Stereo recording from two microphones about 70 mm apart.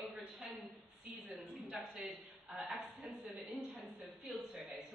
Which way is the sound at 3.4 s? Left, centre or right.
Centre.